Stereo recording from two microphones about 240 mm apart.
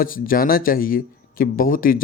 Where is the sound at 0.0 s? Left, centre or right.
Left.